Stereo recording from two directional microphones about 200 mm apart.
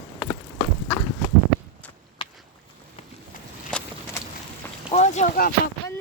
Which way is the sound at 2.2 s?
25° left (ahead or behind).